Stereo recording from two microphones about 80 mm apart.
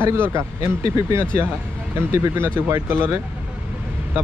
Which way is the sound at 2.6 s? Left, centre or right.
Right.